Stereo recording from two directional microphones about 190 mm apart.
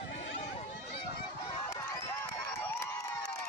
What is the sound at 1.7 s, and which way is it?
Crowd, 15° left (ahead or behind).